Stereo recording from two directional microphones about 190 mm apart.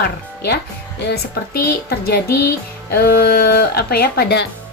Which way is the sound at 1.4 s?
55° left (ahead or behind).